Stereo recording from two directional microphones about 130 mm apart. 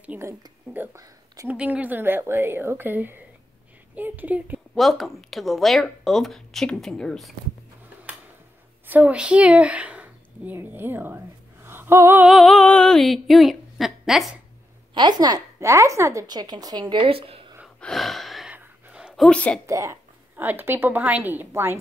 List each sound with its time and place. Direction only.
0.0 s speech: 15° right (ahead or behind)
1.5 s a woman's voice: 10° right (ahead or behind)
4.7 s speech: centre (ahead or behind)
8.8 s a woman's voice: 15° right (ahead or behind)
12.3 s speech: centre (ahead or behind)
15.0 s a woman's voice: 35° right (ahead or behind)
17.7 s gasp: 5° left (ahead or behind)
18.5 s a sound: 10° right (ahead or behind)
19.2 s speech: 5° left (ahead or behind)
19.6 s a woman's voice: 25° right (ahead or behind)